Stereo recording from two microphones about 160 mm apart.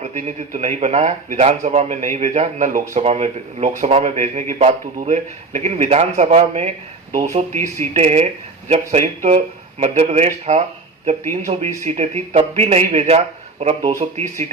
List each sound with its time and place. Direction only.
0.0 s a man's voice: 50° right (ahead or behind)
2.9 s a man's voice: 40° right (ahead or behind)